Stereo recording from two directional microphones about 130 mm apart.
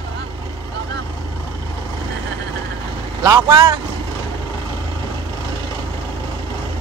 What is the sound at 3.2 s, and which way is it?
Speech, 30° right (ahead or behind).